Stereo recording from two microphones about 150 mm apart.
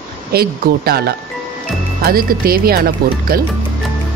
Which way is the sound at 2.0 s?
80° right.